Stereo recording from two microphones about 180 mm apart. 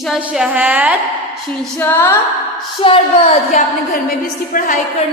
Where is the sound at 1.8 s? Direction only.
15° left (ahead or behind).